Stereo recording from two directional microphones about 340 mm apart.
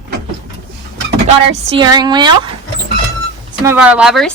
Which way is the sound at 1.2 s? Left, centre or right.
Centre.